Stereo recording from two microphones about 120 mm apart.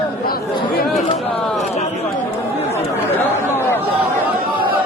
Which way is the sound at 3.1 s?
20° left (ahead or behind).